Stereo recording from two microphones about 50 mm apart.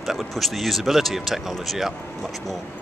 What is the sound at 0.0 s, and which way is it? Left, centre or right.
Speech, centre.